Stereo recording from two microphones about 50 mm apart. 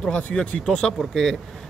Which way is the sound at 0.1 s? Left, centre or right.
Left.